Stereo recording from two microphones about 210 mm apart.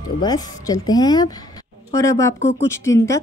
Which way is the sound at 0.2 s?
20° left (ahead or behind).